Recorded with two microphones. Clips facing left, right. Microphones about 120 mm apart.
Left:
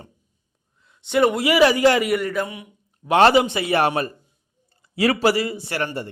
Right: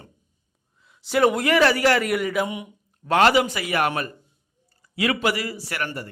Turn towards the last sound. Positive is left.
turn(degrees=25)  # may be behind; listen again after turning